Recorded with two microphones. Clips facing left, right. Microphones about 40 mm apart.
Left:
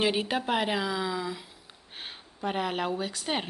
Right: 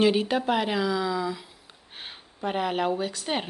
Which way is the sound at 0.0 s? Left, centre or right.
Centre.